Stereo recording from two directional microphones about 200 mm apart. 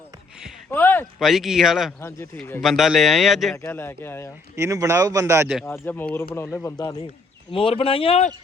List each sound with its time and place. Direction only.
0.7 s a sound: 10° left (ahead or behind)
1.2 s speech: centre (ahead or behind)
2.0 s speech: 15° left (ahead or behind)
2.4 s speech: centre (ahead or behind)
3.6 s speech: 10° left (ahead or behind)
4.5 s speech: 15° right (ahead or behind)
5.6 s speech: 10° left (ahead or behind)
7.5 s speech: 25° left (ahead or behind)